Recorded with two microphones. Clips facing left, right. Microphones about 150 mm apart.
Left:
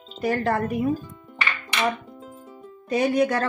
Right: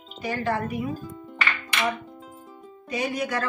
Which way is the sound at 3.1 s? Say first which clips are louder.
Left 6 dB; 35° left (ahead or behind).